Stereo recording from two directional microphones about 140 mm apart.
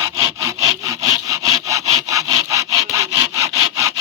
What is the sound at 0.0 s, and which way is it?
Sawing, 20° right (ahead or behind).